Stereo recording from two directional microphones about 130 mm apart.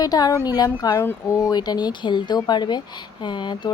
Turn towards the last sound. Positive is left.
turn(degrees=35)  # may be behind; listen again after turning